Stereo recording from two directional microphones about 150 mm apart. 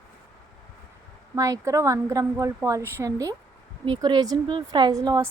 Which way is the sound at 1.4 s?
20° right (ahead or behind).